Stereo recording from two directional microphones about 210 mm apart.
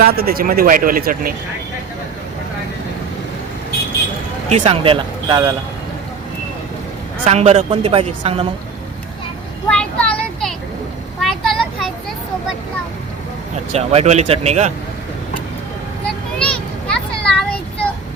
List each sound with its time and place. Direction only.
0.0 s speech: 45° right (ahead or behind)
4.4 s a woman's voice: 30° right (ahead or behind)
7.3 s a woman's voice: 30° right (ahead or behind)
9.6 s a sound: 5° left (ahead or behind)
11.2 s vehicle: centre (ahead or behind)
13.7 s speech: 30° right (ahead or behind)
16.4 s a sound: 5° left (ahead or behind)